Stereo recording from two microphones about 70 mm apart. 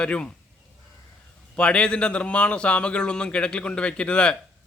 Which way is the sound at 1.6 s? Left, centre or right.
Centre.